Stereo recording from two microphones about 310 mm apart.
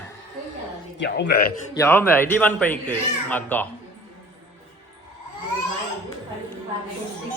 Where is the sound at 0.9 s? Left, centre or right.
Left.